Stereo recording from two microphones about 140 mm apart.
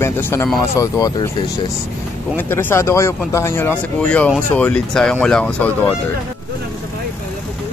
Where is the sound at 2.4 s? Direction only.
15° left (ahead or behind).